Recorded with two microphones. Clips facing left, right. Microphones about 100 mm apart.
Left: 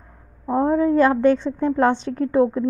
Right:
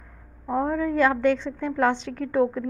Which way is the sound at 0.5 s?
30° left (ahead or behind).